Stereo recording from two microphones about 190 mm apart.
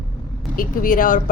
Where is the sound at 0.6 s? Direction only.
45° left (ahead or behind).